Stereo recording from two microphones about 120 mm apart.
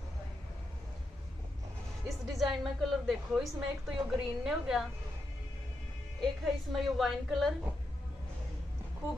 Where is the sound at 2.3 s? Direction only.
Centre (ahead or behind).